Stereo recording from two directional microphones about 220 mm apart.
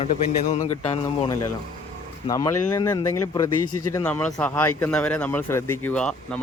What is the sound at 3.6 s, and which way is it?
Speech, 90° left.